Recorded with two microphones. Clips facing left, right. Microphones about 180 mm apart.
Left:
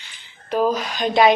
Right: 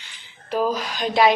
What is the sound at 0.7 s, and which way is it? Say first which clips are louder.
Speech: left 3 dB; centre (ahead or behind).